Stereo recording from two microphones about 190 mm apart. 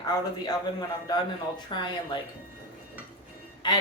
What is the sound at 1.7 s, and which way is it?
Speech, 25° left (ahead or behind).